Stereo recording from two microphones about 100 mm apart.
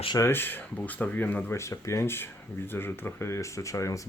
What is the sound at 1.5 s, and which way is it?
Speech, 30° left (ahead or behind).